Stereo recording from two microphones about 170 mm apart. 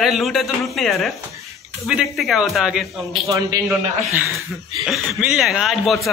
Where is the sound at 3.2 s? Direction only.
20° right (ahead or behind).